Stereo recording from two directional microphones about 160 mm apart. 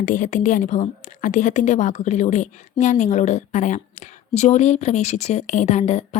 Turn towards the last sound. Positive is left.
turn(degrees=45)  # may be behind; listen again after turning